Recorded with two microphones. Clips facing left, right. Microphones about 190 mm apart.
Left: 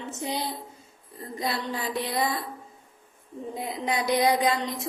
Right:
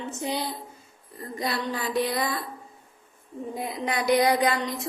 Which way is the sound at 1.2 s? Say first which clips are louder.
Right 1 dB; 25° left (ahead or behind).